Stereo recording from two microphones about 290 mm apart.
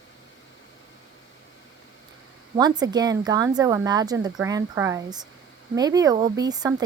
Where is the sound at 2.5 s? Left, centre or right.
Centre.